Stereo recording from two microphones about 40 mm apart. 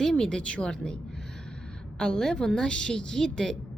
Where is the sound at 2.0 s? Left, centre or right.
Centre.